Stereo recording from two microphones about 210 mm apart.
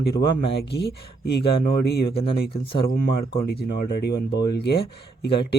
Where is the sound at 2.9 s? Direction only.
50° left (ahead or behind).